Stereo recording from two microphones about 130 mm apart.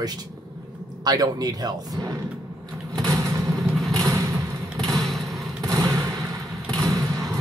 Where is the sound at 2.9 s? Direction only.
25° right (ahead or behind).